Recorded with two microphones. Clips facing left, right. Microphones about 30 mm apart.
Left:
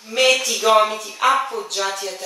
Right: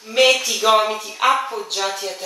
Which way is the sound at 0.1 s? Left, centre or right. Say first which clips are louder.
Right 1 dB; centre.